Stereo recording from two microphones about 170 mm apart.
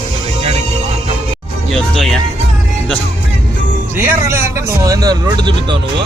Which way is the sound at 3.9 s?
15° right (ahead or behind).